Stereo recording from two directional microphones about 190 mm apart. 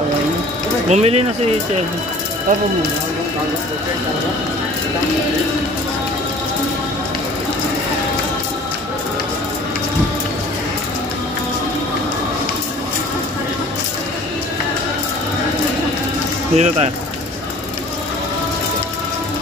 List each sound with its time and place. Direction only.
0.8 s speech: 35° right (ahead or behind)
16.5 s speech: 35° right (ahead or behind)